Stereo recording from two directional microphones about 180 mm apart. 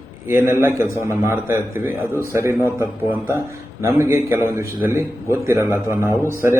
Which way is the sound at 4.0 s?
15° right (ahead or behind).